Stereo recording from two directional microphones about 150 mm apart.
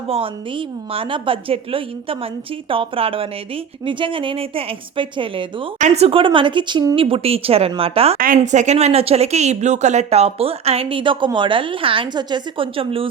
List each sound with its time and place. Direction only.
0.1 s a woman's voice: 40° right (ahead or behind)
5.8 s a woman's voice: 45° right (ahead or behind)
8.2 s a woman's voice: 60° right (ahead or behind); by 13.1 s 35° right (ahead or behind)